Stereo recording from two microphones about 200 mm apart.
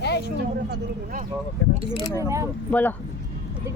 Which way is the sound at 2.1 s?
15° right (ahead or behind).